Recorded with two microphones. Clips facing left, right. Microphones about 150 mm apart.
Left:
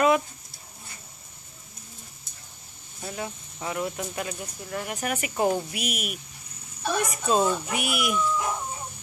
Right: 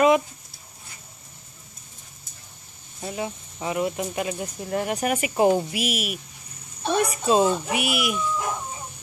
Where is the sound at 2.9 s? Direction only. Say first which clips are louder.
Right 4 dB; 15° right (ahead or behind).